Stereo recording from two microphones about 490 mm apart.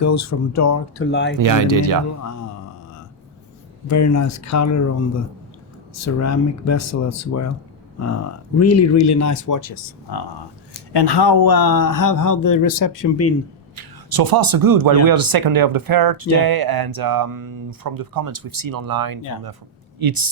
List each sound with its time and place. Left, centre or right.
0.0 s speech: left
1.1 s speech: left
1.4 s speech: right
2.2 s a sound: left
3.8 s speech: left
13.7 s speech: right